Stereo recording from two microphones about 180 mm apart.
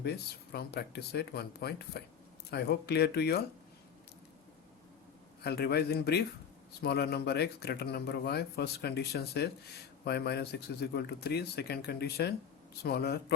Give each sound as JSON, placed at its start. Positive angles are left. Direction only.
{"t": 0.0, "sound": "speech", "side_deg": 60}
{"t": 5.4, "sound": "speech", "side_deg": 65}